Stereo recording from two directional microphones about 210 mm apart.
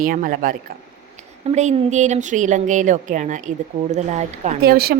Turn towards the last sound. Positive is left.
turn(degrees=-45)  # may be behind; listen again after turning